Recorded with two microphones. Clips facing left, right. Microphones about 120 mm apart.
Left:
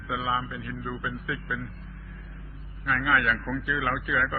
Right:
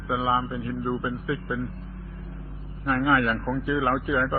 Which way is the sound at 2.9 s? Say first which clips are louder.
Right 3 dB; 30° right (ahead or behind).